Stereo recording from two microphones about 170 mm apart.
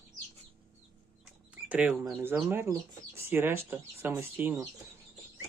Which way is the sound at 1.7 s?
5° right (ahead or behind).